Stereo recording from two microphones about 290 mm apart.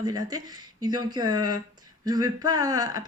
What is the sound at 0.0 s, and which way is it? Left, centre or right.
Speech, centre.